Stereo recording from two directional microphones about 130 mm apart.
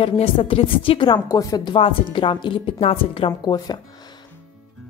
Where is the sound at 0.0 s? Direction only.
45° left (ahead or behind).